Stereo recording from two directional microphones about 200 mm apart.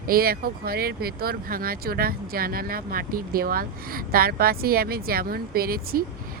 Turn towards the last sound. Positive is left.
turn(degrees=-50)  # may be behind; listen again after turning